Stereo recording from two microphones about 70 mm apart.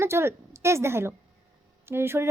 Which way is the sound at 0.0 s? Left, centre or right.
Right.